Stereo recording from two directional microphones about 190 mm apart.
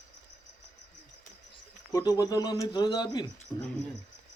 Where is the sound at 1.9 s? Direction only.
20° left (ahead or behind).